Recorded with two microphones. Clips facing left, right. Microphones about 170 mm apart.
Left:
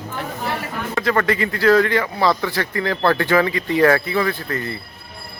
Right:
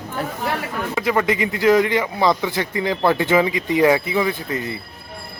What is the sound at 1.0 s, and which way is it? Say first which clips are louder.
A man's voice: even; 10° right (ahead or behind).